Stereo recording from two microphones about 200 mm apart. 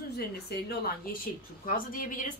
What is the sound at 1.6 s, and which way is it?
Speech, 45° left (ahead or behind).